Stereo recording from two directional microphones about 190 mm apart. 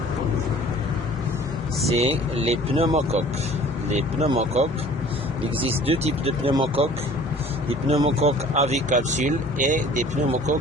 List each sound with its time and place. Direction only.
1.9 s speech: 30° right (ahead or behind)
7.9 s speech: 30° right (ahead or behind)